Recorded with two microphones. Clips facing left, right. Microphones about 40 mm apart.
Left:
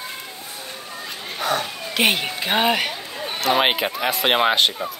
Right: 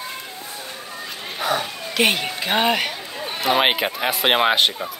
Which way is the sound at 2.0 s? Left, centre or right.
Centre.